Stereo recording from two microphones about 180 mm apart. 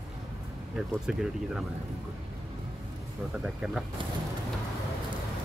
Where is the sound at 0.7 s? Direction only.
5° right (ahead or behind).